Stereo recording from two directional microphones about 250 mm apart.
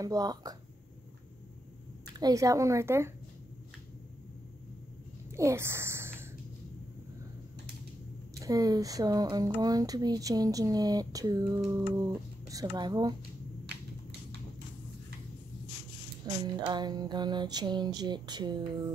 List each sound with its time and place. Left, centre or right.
0.0 s speech: centre
2.1 s speech: centre
5.3 s a sound: centre
8.4 s speech: centre
16.3 s music: centre
16.6 s speech: centre